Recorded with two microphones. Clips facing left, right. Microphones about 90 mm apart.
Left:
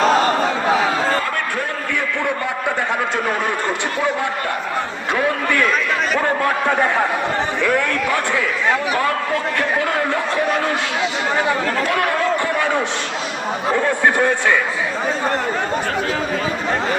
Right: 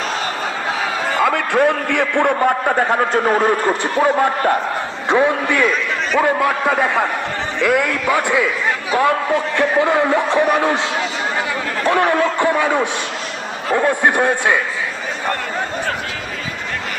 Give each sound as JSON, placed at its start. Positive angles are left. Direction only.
{"t": 1.2, "sound": "a sound", "side_deg": -90}
{"t": 2.2, "sound": "a man's voice", "side_deg": -45}
{"t": 5.1, "sound": "a man's voice", "side_deg": -15}
{"t": 6.1, "sound": "a man's voice", "side_deg": -5}
{"t": 11.9, "sound": "a man's voice", "side_deg": -25}